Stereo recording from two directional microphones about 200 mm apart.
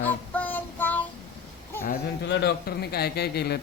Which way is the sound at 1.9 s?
60° left (ahead or behind).